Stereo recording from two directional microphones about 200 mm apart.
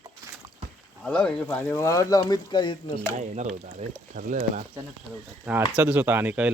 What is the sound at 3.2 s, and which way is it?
Speech, 35° right (ahead or behind).